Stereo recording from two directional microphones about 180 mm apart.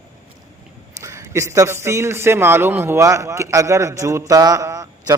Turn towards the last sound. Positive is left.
turn(degrees=-20)  # may be behind; listen again after turning